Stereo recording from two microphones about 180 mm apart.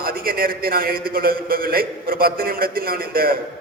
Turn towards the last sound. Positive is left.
turn(degrees=-55)  # may be behind; listen again after turning